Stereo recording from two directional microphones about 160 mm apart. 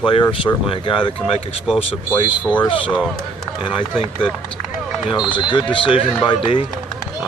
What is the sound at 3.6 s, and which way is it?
Speech, 30° left (ahead or behind).